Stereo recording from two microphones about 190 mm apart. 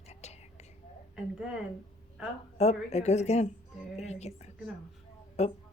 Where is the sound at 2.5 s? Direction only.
35° left (ahead or behind).